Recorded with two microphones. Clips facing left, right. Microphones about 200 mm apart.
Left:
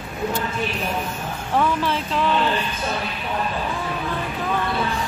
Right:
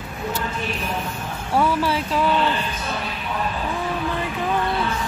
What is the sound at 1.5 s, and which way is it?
Speech, 10° right (ahead or behind).